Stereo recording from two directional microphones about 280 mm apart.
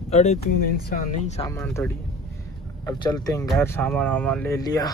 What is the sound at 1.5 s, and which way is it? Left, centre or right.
Speech, centre.